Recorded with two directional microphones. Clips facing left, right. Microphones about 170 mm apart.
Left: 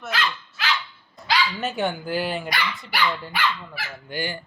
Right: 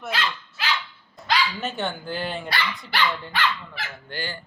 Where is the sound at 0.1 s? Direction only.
30° right (ahead or behind).